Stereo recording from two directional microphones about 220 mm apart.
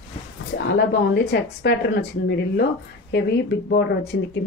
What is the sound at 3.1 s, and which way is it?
Speech, 50° left (ahead or behind).